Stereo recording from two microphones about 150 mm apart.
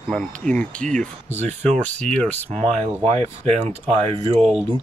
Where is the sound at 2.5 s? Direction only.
40° right (ahead or behind).